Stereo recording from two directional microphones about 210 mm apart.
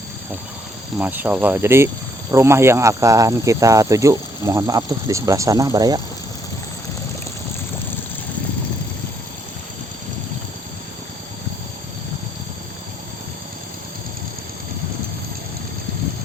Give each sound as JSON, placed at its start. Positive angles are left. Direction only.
{"t": 0.9, "sound": "speech", "side_deg": -10}